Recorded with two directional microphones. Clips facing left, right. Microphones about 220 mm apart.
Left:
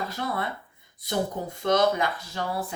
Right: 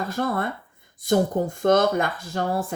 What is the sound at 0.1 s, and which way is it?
Speech, 50° right (ahead or behind).